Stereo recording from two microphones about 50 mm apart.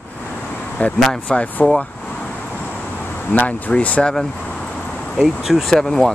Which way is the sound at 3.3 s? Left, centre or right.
Left.